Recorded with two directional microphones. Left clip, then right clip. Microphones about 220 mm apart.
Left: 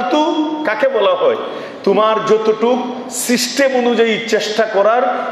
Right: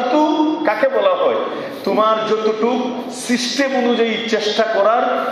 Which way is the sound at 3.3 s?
50° left (ahead or behind).